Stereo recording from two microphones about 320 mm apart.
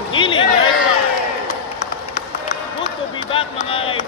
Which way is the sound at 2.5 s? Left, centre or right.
Left.